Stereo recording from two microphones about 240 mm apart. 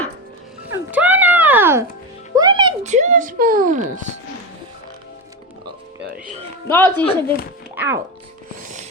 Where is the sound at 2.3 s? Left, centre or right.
Centre.